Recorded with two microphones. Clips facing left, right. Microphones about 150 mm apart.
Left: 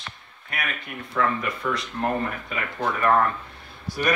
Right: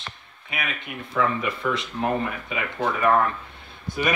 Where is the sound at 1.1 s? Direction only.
5° right (ahead or behind).